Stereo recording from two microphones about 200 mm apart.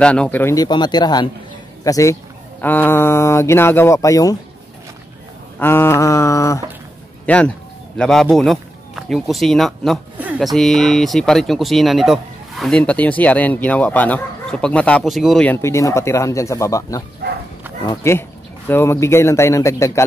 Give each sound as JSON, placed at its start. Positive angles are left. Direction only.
{"t": 0.0, "sound": "speech", "side_deg": 5}
{"t": 5.6, "sound": "speech", "side_deg": 10}
{"t": 17.2, "sound": "bow-wow", "side_deg": -55}
{"t": 17.8, "sound": "speech", "side_deg": 15}